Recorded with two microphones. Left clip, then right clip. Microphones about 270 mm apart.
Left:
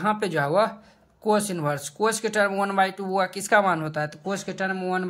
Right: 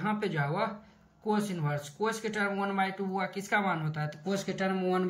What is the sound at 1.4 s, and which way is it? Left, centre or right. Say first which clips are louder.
Speech: left 8 dB; centre.